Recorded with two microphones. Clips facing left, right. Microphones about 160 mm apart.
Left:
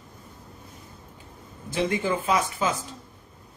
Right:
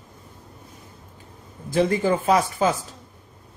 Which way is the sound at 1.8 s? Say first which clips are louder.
Right 5 dB; 40° right (ahead or behind).